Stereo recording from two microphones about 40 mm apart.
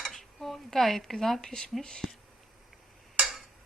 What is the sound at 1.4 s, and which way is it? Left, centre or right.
Speech, centre.